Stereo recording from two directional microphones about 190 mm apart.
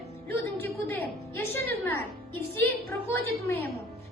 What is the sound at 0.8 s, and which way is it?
Music, 10° left (ahead or behind).